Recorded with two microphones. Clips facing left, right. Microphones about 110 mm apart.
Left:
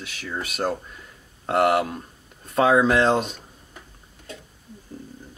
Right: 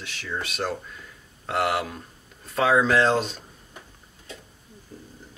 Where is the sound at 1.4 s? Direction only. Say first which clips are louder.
Left 5 dB; 45° left (ahead or behind).